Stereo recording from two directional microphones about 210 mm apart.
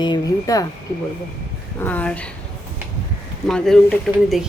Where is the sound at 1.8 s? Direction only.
5° left (ahead or behind).